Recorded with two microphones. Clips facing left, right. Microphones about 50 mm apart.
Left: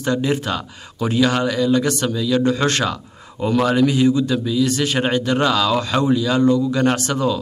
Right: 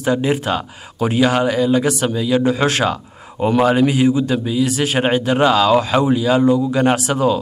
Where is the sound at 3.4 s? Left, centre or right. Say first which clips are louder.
Right 3 dB; right.